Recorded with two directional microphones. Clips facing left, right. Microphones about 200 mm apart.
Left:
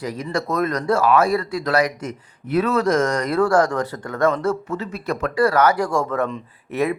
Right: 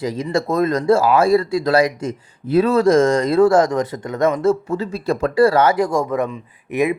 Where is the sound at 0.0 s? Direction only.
25° right (ahead or behind).